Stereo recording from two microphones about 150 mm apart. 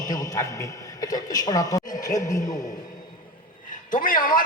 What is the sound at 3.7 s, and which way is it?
Speech, 60° left (ahead or behind).